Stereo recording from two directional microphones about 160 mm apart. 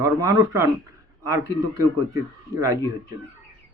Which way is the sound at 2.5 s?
20° right (ahead or behind).